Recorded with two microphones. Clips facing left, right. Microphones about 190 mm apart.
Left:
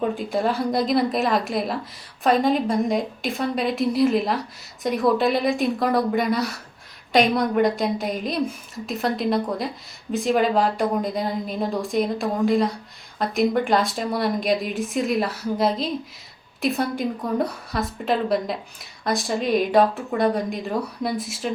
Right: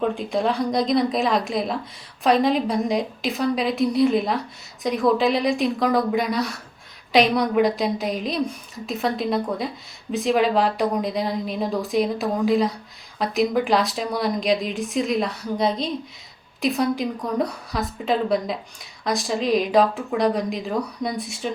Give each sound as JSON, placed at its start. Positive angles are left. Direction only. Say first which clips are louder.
{"t": 0.0, "sound": "a woman's voice", "louder": "even", "side_deg": 5}